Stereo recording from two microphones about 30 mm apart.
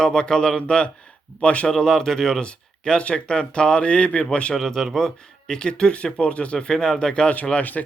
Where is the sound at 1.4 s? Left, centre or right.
Left.